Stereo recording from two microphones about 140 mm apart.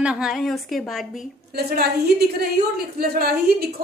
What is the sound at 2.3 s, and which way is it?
A woman's voice, 90° right.